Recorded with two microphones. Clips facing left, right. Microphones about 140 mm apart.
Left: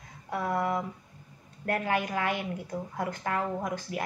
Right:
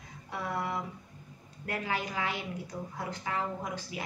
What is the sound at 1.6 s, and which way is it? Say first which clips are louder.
A woman's voice: left 5 dB; 50° left (ahead or behind).